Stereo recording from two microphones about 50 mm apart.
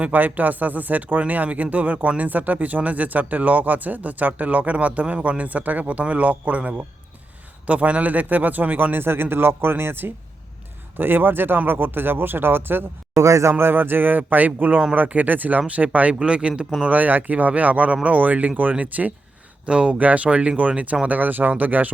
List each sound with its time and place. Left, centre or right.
0.0 s speech: right
13.1 s a man's voice: right
13.5 s speech: right
19.6 s speech: right
21.1 s speech: right